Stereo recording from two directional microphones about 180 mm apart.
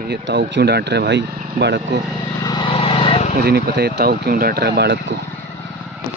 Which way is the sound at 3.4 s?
65° right (ahead or behind).